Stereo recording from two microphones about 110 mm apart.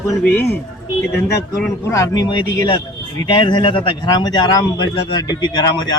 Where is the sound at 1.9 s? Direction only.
30° left (ahead or behind).